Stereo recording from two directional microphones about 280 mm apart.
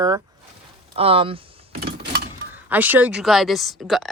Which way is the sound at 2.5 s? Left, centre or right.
Centre.